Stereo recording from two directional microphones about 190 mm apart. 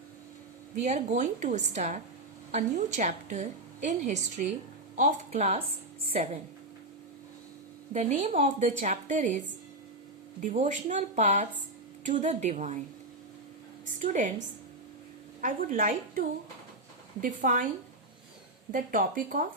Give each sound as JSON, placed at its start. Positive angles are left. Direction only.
{"t": 0.8, "sound": "a woman's voice", "side_deg": -40}
{"t": 7.9, "sound": "a woman's voice", "side_deg": -40}
{"t": 10.4, "sound": "a woman's voice", "side_deg": -40}
{"t": 14.0, "sound": "a woman's voice", "side_deg": -40}
{"t": 18.7, "sound": "a woman's voice", "side_deg": -45}